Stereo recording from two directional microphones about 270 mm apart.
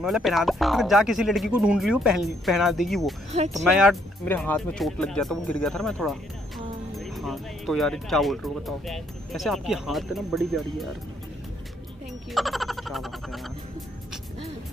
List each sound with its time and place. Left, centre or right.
0.0 s speech: centre
3.3 s speech: right
3.5 s speech: centre
12.3 s frog: centre